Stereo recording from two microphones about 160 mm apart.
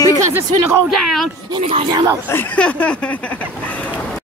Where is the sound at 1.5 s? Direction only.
30° right (ahead or behind).